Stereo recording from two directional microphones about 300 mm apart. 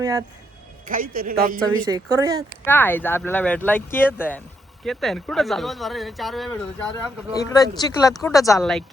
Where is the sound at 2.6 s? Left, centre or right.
Centre.